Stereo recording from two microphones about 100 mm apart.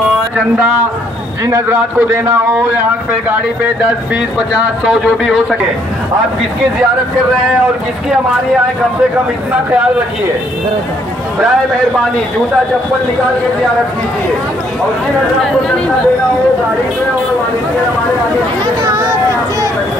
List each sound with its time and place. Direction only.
1.4 s a man's voice: 25° right (ahead or behind)
4.6 s speech: 5° right (ahead or behind)